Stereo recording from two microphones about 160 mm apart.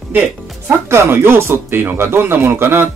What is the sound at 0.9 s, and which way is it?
A man's voice, 15° right (ahead or behind).